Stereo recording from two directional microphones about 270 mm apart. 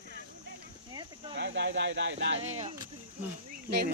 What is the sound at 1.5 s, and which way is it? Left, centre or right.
Speech, right.